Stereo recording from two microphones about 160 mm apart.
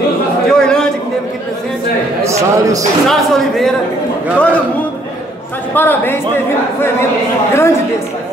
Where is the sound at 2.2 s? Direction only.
20° right (ahead or behind).